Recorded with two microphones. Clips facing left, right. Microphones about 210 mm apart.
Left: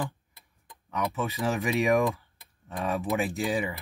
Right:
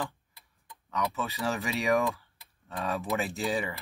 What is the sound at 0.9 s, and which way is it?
Speech, 15° left (ahead or behind).